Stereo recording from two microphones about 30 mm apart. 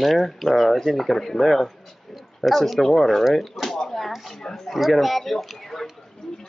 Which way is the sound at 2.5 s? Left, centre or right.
Centre.